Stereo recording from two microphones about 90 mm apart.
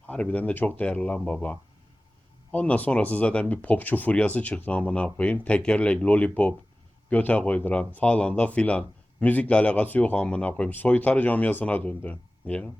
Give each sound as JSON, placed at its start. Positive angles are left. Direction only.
{"t": 0.1, "sound": "speech", "side_deg": 15}